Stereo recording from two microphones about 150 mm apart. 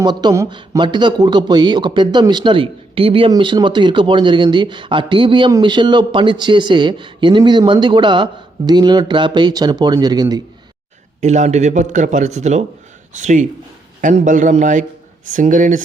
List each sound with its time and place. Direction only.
0.0 s speech: 30° right (ahead or behind)
11.2 s a man's voice: 50° right (ahead or behind)